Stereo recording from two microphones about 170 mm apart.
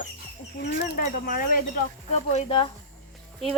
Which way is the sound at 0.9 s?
55° left (ahead or behind).